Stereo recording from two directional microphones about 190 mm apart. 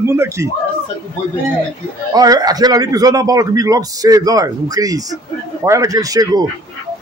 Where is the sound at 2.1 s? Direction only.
20° right (ahead or behind).